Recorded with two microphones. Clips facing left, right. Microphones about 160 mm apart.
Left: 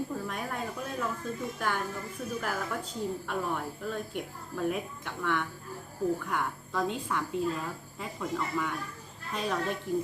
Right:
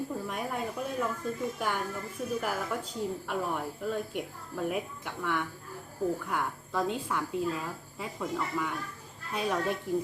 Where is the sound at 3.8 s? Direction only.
5° right (ahead or behind).